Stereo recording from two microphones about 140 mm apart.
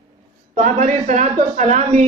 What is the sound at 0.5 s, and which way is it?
Speech, 65° right (ahead or behind).